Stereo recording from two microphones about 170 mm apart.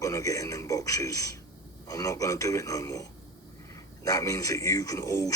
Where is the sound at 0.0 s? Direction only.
20° left (ahead or behind).